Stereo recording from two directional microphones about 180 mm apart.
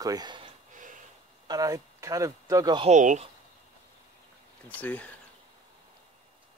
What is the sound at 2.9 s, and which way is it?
Speech, 40° right (ahead or behind).